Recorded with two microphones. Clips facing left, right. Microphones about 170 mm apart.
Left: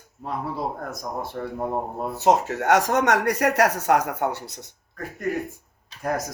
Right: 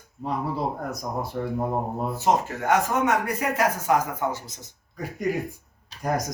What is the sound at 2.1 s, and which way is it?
Speech, 75° left (ahead or behind).